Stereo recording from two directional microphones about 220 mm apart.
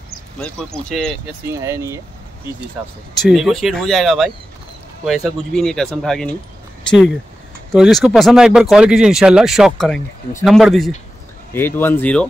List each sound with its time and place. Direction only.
0.4 s speech: 5° left (ahead or behind)
1.6 s speech: 15° right (ahead or behind)
3.2 s speech: centre (ahead or behind)
7.7 s speech: centre (ahead or behind)